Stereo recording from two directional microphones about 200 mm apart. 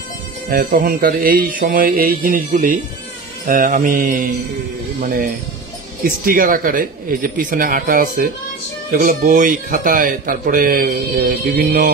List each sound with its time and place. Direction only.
0.5 s speech: 50° right (ahead or behind)